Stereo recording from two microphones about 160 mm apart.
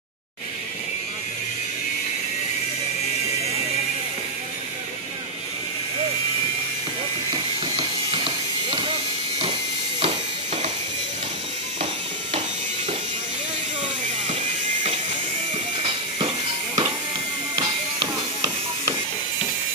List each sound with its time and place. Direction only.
7.6 s ratchet: 35° right (ahead or behind)
9.9 s music: 45° right (ahead or behind)
16.2 s music: 30° right (ahead or behind)